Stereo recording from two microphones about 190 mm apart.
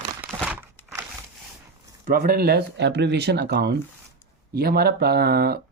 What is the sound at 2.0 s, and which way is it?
Speech, 50° right (ahead or behind).